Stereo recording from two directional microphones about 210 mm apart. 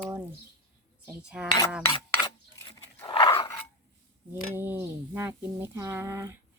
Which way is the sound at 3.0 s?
25° left (ahead or behind).